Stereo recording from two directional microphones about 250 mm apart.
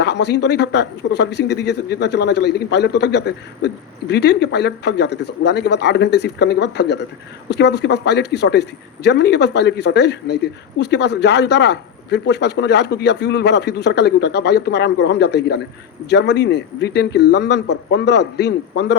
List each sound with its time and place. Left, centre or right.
0.0 s speech: left